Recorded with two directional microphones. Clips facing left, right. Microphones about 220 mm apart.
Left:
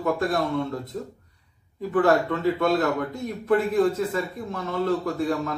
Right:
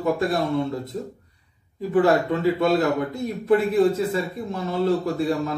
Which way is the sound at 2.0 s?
10° right (ahead or behind).